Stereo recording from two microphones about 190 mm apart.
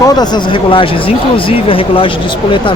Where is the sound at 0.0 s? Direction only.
20° left (ahead or behind).